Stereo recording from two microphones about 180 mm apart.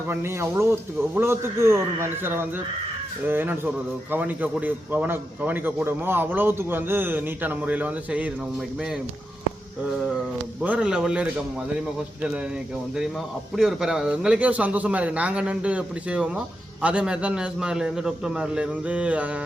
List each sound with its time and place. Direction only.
0.1 s a man's voice: 15° right (ahead or behind)
10.6 s a man's voice: 5° right (ahead or behind)
13.6 s a man's voice: 5° right (ahead or behind)